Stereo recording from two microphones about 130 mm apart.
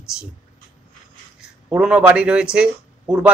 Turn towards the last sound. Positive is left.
turn(degrees=-5)  # may be behind; listen again after turning